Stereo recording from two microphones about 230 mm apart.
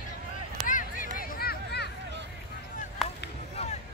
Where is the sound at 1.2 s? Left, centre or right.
Left.